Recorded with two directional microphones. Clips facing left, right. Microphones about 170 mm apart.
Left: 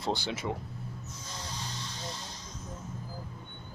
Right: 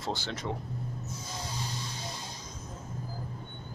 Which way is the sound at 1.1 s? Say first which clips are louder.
Right 3 dB; 10° right (ahead or behind).